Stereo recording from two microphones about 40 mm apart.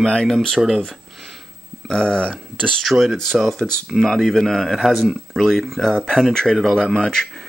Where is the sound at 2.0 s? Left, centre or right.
Left.